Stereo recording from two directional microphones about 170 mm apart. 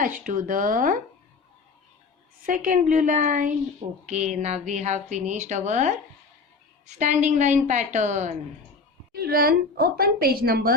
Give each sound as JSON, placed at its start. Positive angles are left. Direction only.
{"t": 0.0, "sound": "speech", "side_deg": -50}
{"t": 2.5, "sound": "speech", "side_deg": -50}
{"t": 9.1, "sound": "a woman's voice", "side_deg": -65}